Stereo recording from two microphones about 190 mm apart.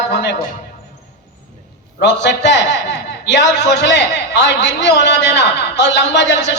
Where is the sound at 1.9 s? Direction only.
70° left (ahead or behind).